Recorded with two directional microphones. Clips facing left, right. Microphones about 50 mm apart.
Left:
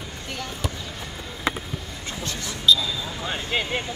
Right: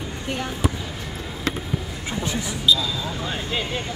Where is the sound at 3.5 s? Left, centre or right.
Left.